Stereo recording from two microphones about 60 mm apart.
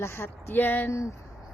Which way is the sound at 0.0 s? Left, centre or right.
Left.